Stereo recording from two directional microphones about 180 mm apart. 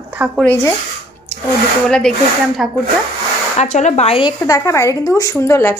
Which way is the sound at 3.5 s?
40° left (ahead or behind).